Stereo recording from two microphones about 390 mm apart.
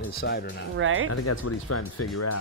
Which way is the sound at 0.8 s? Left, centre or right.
Right.